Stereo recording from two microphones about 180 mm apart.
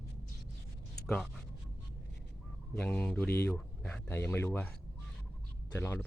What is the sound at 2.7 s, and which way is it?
A man's voice, 10° left (ahead or behind).